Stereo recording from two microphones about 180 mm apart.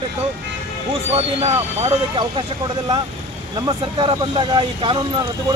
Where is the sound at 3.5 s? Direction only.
25° right (ahead or behind).